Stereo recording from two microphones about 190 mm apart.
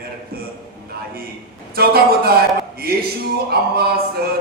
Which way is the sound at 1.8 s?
55° right (ahead or behind).